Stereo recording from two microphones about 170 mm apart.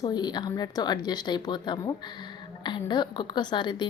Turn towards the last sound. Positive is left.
turn(degrees=25)  # may be behind; listen again after turning